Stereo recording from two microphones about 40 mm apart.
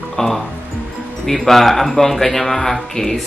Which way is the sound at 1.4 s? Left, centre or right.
Centre.